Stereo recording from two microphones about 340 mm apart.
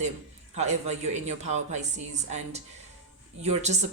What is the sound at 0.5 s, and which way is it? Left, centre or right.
Speech, centre.